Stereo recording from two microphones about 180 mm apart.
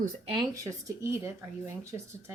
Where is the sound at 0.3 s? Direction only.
15° right (ahead or behind).